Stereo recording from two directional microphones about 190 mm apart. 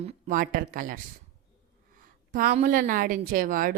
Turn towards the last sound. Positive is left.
turn(degrees=-45)  # may be behind; listen again after turning